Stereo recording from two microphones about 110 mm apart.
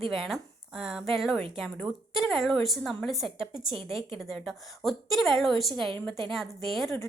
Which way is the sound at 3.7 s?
55° right (ahead or behind).